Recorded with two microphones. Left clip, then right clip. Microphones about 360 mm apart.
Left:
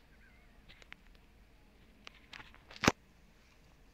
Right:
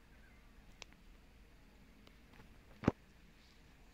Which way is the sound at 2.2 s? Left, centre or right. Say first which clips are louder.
Left 11 dB; left.